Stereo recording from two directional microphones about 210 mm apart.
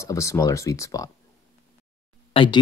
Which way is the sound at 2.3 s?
20° left (ahead or behind).